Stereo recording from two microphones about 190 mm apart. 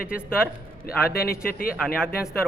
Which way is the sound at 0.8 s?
50° left (ahead or behind).